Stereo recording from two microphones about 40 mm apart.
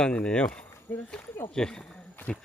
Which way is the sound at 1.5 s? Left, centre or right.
Centre.